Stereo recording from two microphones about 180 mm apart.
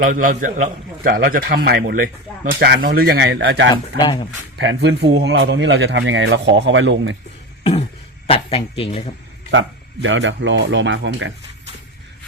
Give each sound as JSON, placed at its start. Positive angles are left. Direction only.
{"t": 0.0, "sound": "a man's voice", "side_deg": -45}
{"t": 4.0, "sound": "speech", "side_deg": 30}
{"t": 4.5, "sound": "a man's voice", "side_deg": -85}
{"t": 8.3, "sound": "speech", "side_deg": 30}
{"t": 9.5, "sound": "a man's voice", "side_deg": -90}